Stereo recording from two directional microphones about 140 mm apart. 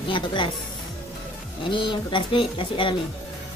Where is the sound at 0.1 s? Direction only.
35° left (ahead or behind).